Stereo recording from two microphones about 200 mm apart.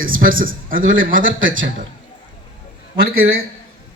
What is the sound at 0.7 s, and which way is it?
A man's voice, 80° right.